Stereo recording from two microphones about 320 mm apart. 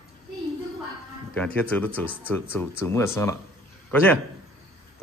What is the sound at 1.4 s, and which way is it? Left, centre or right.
A man's voice, centre.